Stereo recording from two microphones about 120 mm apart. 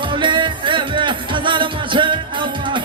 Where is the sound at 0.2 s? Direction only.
40° right (ahead or behind).